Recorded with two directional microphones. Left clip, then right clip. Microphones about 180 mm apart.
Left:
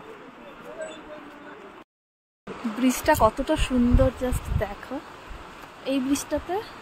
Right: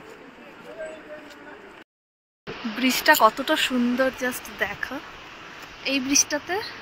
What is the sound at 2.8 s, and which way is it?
Speech, 15° left (ahead or behind).